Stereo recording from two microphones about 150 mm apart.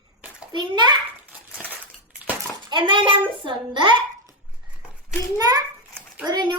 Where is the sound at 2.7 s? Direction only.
35° right (ahead or behind).